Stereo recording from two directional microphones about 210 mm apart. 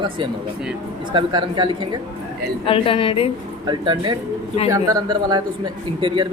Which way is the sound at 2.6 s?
25° left (ahead or behind).